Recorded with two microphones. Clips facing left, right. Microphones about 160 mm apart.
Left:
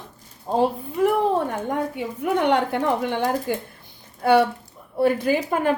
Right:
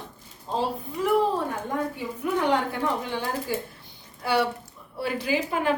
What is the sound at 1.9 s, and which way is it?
Speech, 65° left (ahead or behind).